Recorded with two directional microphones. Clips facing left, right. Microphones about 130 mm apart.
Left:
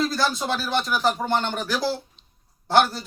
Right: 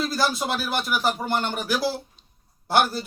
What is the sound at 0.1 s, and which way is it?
Speech, 5° right (ahead or behind).